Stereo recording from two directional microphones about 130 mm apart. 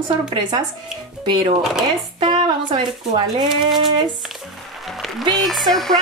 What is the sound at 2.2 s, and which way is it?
Speech, 40° right (ahead or behind).